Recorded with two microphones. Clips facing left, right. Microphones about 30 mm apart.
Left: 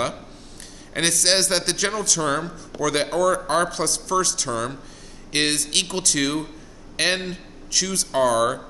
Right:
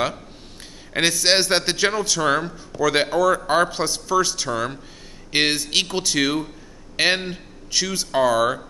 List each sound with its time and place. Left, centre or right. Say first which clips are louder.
0.9 s a man's voice: right 2 dB; centre